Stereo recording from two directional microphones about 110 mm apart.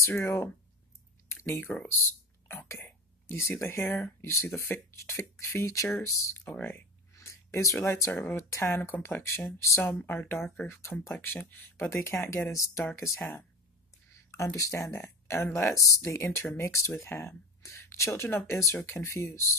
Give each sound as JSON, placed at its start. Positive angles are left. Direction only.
{"t": 0.0, "sound": "speech", "side_deg": 25}
{"t": 2.4, "sound": "whispering", "side_deg": 25}
{"t": 3.4, "sound": "speech", "side_deg": 20}
{"t": 6.4, "sound": "speech", "side_deg": 15}
{"t": 14.3, "sound": "speech", "side_deg": 30}